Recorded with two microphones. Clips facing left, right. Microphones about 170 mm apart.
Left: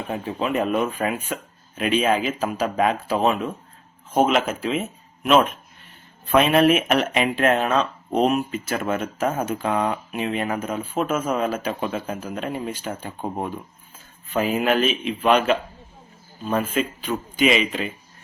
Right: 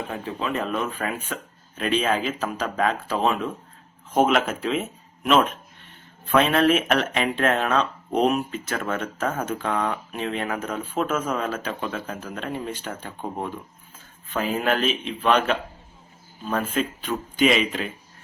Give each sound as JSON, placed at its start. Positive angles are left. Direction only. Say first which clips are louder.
{"t": 0.1, "sound": "speech", "louder": "left 8 dB", "side_deg": 20}
{"t": 6.3, "sound": "a man's voice", "louder": "left 2 dB", "side_deg": 15}